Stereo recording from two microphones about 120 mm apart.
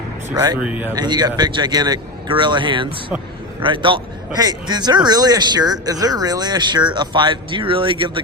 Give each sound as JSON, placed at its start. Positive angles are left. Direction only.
{"t": 0.3, "sound": "speech", "side_deg": -25}
{"t": 0.6, "sound": "speech", "side_deg": -10}
{"t": 0.9, "sound": "a man's voice", "side_deg": -35}